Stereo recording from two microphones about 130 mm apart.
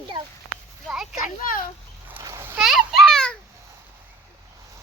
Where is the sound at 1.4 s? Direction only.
90° left.